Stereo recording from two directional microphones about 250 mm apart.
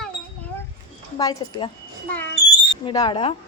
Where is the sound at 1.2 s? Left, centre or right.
Centre.